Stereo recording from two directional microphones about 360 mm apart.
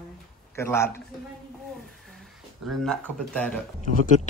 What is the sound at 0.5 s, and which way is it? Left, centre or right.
Speech, centre.